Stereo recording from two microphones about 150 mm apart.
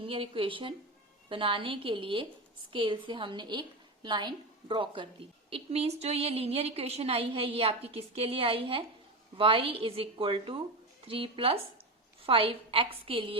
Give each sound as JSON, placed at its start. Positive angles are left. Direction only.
{"t": 0.0, "sound": "a woman's voice", "side_deg": -35}
{"t": 5.5, "sound": "a woman's voice", "side_deg": -45}